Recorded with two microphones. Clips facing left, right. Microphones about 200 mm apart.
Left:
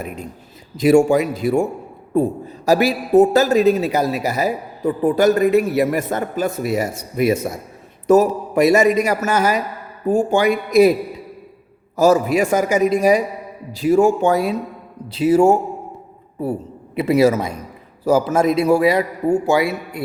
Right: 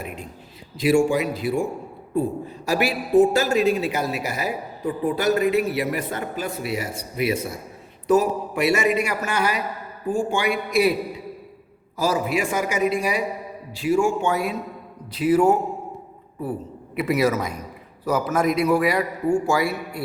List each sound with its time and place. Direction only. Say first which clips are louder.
0.8 s a man's voice: left 6 dB; 45° left (ahead or behind)
11.9 s a man's voice: left 8 dB; 45° left (ahead or behind); by 20.0 s 20° left (ahead or behind)